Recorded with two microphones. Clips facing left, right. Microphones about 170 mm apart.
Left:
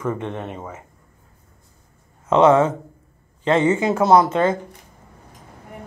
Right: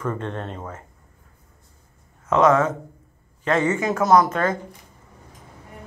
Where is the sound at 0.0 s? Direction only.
10° left (ahead or behind).